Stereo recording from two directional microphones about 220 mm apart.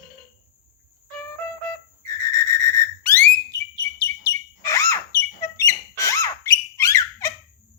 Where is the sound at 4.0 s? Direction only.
15° left (ahead or behind).